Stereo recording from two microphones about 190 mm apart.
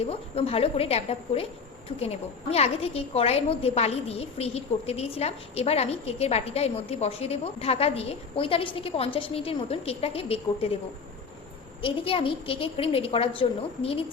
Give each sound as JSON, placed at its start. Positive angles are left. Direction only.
{"t": 0.0, "sound": "a woman's voice", "side_deg": 30}
{"t": 11.8, "sound": "a woman's voice", "side_deg": 30}